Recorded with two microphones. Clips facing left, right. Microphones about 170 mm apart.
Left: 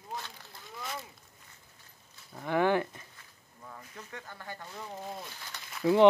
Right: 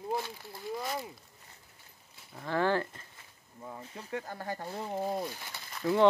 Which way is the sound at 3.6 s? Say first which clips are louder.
Right 4 dB; 25° right (ahead or behind).